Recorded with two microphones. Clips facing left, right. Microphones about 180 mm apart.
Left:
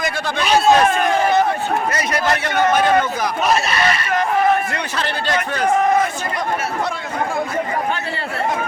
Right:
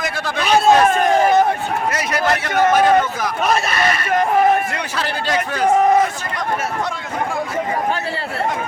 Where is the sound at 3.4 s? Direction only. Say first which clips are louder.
Even; 50° right (ahead or behind).